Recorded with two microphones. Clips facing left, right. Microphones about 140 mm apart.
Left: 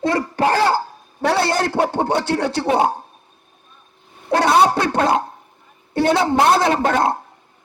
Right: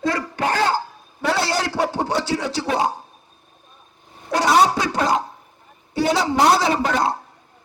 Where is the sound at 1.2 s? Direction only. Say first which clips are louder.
Left 3 dB; 60° left (ahead or behind).